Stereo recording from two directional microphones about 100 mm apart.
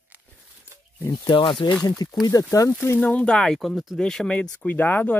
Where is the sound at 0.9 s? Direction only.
25° left (ahead or behind).